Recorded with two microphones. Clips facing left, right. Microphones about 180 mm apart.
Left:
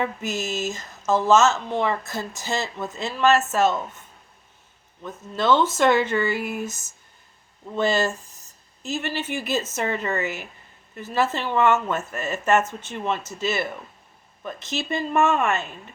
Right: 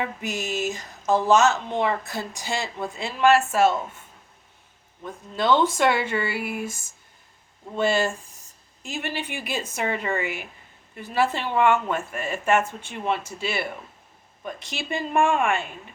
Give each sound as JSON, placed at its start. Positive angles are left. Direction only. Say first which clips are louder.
{"t": 0.2, "sound": "a woman's voice", "louder": "left 1 dB", "side_deg": -15}
{"t": 5.4, "sound": "a woman's voice", "louder": "left 1 dB", "side_deg": -15}
{"t": 10.2, "sound": "speech", "louder": "left 1 dB", "side_deg": 40}
{"t": 10.9, "sound": "a woman's voice", "louder": "even", "side_deg": -10}